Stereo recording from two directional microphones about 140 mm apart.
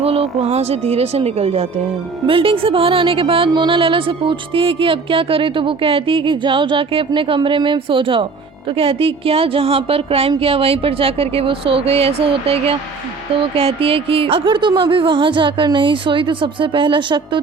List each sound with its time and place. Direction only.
0.0 s a woman's voice: 45° right (ahead or behind)